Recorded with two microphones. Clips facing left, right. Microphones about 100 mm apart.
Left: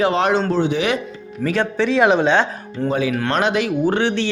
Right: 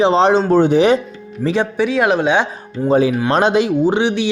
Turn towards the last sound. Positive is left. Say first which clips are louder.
# right 3 dB
turn(degrees=-15)  # may be behind; listen again after turning